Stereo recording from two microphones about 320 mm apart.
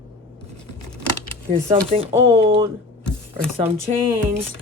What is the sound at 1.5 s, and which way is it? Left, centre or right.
Speech, centre.